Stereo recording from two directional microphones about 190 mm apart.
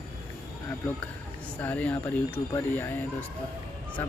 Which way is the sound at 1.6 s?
10° left (ahead or behind).